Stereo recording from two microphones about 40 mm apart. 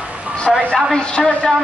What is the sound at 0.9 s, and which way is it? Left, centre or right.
Speech, left.